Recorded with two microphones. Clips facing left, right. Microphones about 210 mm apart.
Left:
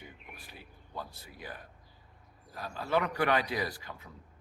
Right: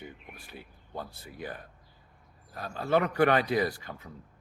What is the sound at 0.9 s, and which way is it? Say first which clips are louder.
Speech: right 4 dB; 55° right (ahead or behind).